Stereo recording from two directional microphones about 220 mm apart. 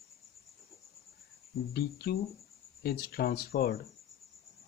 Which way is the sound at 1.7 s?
45° left (ahead or behind).